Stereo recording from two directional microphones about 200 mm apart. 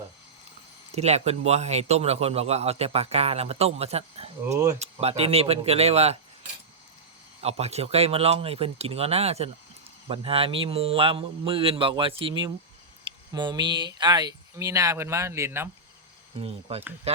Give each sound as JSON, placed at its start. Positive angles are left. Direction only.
{"t": 0.9, "sound": "a man's voice", "side_deg": -30}
{"t": 4.5, "sound": "speech", "side_deg": -20}
{"t": 4.8, "sound": "a man's voice", "side_deg": -30}
{"t": 7.4, "sound": "a man's voice", "side_deg": -30}
{"t": 16.4, "sound": "a man's voice", "side_deg": -30}